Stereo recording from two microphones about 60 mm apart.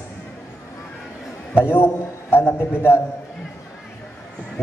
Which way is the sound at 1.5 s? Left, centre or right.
Left.